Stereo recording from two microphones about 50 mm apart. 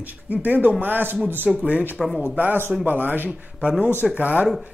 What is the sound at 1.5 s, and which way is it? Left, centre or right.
Speech, right.